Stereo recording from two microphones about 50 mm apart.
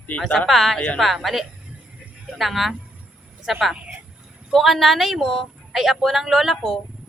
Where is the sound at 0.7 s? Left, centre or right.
Left.